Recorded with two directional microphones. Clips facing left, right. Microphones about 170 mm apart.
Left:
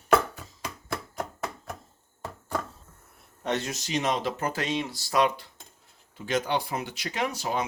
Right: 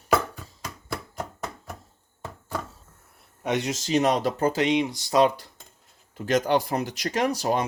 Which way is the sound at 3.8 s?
40° right (ahead or behind).